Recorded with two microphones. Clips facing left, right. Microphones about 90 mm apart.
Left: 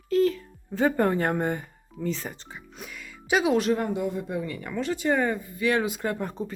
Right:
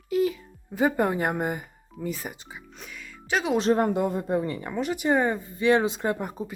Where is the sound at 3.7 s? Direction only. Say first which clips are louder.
Right 3 dB; 50° right (ahead or behind).